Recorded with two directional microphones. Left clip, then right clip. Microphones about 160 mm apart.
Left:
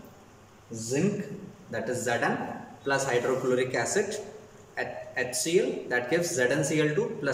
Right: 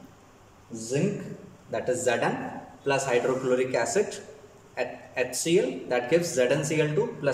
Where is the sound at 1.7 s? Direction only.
20° right (ahead or behind).